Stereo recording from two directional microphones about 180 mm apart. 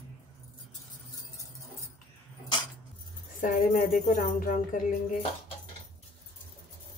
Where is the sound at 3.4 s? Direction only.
45° left (ahead or behind).